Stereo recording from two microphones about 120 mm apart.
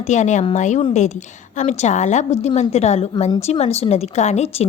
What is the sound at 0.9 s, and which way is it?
A woman's voice, 75° left (ahead or behind).